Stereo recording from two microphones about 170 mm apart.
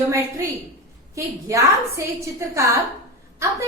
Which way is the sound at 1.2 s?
20° right (ahead or behind).